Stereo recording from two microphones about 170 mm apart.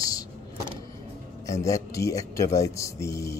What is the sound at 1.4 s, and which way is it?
Speech, 20° left (ahead or behind).